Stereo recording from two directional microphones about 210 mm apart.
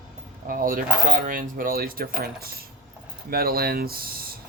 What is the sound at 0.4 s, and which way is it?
Speech, 40° right (ahead or behind).